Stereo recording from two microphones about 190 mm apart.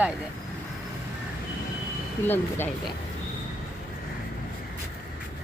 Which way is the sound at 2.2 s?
10° left (ahead or behind).